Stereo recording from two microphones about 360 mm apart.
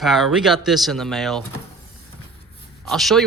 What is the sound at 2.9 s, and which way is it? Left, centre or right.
Speech, centre.